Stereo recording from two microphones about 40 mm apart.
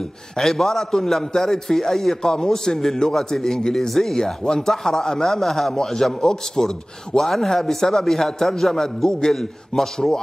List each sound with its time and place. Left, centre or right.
0.4 s a man's voice: centre